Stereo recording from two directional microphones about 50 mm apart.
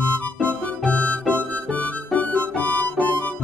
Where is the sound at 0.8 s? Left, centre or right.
Left.